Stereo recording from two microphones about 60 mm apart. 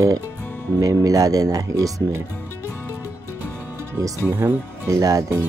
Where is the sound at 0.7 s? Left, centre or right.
Right.